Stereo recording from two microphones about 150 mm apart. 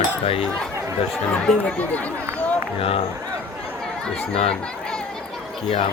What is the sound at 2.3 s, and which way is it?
Run, 10° left (ahead or behind).